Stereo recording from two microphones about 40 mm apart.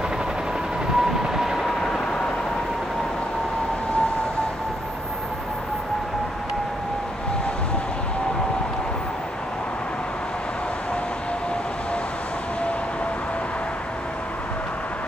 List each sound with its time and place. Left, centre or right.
0.9 s vehicle: centre
1.8 s vehicle: centre